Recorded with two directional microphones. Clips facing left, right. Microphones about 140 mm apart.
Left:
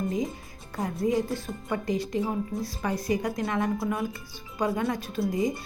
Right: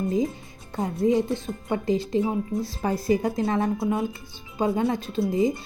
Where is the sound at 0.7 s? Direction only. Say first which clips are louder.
Right 4 dB; 25° right (ahead or behind).